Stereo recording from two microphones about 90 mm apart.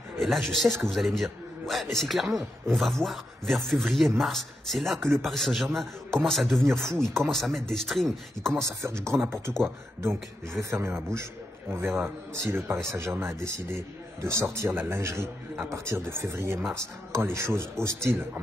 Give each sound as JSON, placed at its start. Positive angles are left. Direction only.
{"t": 0.2, "sound": "a man's voice", "side_deg": 0}
{"t": 8.5, "sound": "a man's voice", "side_deg": -30}